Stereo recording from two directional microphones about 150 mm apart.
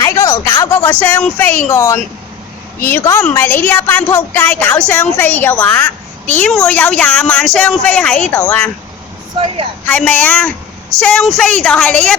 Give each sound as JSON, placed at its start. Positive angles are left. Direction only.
{"t": 0.0, "sound": "a sound", "side_deg": 20}
{"t": 0.6, "sound": "a child's voice", "side_deg": 15}
{"t": 9.8, "sound": "a child's voice", "side_deg": 10}